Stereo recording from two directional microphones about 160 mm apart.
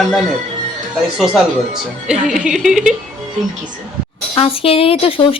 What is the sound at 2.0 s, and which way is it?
Speech, 5° right (ahead or behind).